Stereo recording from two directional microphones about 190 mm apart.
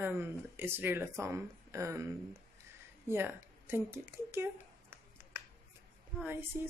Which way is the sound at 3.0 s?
10° right (ahead or behind).